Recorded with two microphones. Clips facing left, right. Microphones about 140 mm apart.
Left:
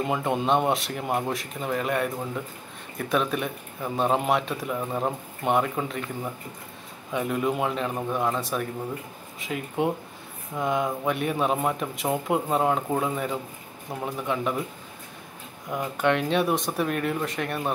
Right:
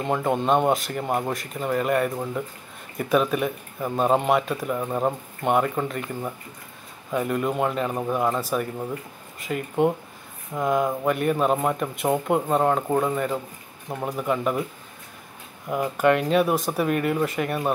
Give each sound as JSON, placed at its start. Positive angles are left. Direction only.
{"t": 0.0, "sound": "speech", "side_deg": 0}
{"t": 15.7, "sound": "speech", "side_deg": -5}